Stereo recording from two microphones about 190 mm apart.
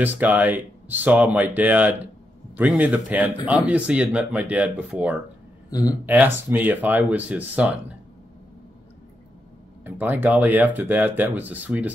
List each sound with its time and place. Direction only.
0.0 s speech: 10° right (ahead or behind)
5.7 s speech: 20° left (ahead or behind)
6.0 s speech: 10° right (ahead or behind)
9.8 s speech: 10° right (ahead or behind)